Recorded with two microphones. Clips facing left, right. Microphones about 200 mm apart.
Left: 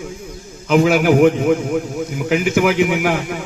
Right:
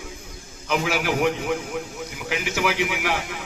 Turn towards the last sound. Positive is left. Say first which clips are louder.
# left 8 dB
turn(degrees=50)  # may be behind; listen again after turning